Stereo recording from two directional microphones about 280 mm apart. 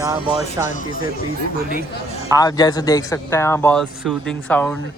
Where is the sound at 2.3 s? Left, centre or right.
Centre.